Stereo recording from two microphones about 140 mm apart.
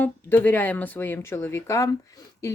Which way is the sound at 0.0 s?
15° left (ahead or behind).